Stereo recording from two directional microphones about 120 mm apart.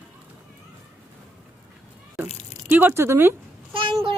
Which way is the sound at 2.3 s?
65° left (ahead or behind).